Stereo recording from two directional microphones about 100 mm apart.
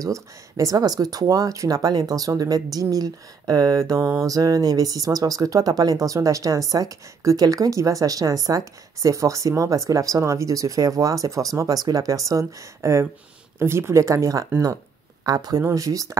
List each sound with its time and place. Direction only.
0.0 s speech: 35° right (ahead or behind)